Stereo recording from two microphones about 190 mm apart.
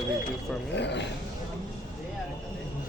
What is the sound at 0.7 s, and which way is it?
Speech, 65° left (ahead or behind).